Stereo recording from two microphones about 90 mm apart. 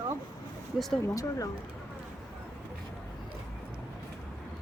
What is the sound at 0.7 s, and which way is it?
Speech, centre (ahead or behind).